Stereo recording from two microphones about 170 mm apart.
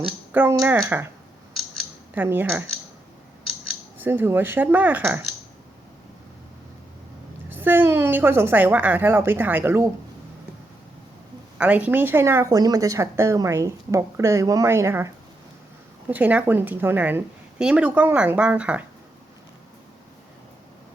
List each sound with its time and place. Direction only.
0.3 s speech: 10° right (ahead or behind)
2.1 s speech: 10° right (ahead or behind)
3.7 s speech: 10° right (ahead or behind)
7.5 s speech: 10° right (ahead or behind)
11.5 s speech: 10° right (ahead or behind)